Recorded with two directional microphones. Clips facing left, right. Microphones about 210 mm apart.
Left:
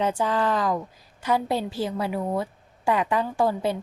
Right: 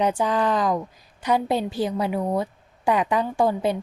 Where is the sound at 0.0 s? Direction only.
15° right (ahead or behind).